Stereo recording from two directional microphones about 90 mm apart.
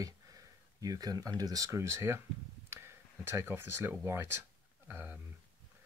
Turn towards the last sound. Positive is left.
turn(degrees=-25)  # may be behind; listen again after turning